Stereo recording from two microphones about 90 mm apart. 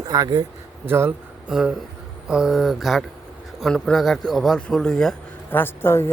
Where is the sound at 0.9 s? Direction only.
25° right (ahead or behind).